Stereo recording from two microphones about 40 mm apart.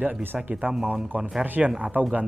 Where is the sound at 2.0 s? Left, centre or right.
Right.